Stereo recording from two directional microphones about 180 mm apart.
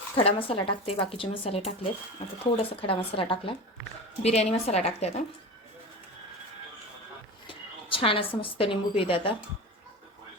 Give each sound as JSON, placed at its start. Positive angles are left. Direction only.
{"t": 0.2, "sound": "speech", "side_deg": 30}
{"t": 7.4, "sound": "a woman's voice", "side_deg": 30}